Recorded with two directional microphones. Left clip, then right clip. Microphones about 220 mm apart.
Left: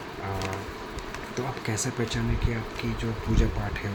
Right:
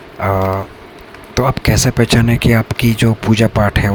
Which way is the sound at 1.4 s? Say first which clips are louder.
Right 18 dB; 45° right (ahead or behind).